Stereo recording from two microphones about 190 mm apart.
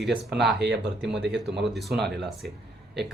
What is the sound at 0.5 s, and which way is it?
Speech, 65° right (ahead or behind).